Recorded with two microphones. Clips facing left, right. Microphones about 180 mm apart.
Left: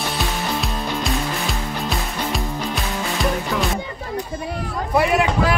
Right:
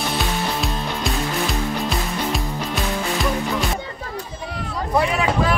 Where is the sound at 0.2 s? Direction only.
Centre (ahead or behind).